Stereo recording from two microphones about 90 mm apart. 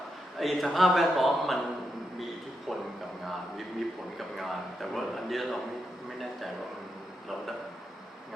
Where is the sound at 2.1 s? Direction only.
Centre (ahead or behind).